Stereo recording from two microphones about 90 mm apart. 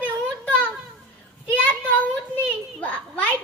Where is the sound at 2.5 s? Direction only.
15° left (ahead or behind).